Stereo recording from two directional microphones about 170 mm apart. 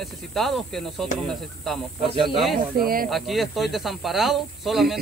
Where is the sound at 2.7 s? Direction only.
60° right (ahead or behind).